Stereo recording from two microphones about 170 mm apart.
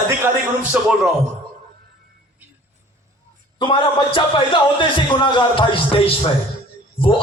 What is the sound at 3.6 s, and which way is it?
A man's voice, 30° left (ahead or behind).